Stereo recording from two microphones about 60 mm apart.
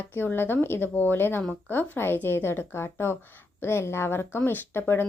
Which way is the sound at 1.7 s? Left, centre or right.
Left.